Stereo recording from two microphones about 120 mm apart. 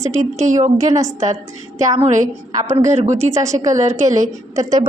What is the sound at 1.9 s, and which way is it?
A woman's voice, 75° right (ahead or behind).